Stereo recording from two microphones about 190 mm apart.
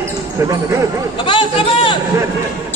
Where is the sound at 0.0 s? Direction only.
15° right (ahead or behind).